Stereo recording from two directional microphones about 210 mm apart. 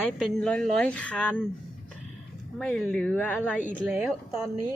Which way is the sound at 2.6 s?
5° left (ahead or behind).